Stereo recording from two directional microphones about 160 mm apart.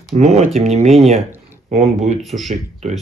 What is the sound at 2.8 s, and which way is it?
Speech, 45° right (ahead or behind).